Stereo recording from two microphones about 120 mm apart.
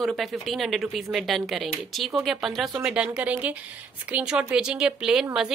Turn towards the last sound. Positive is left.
turn(degrees=-5)  # may be behind; listen again after turning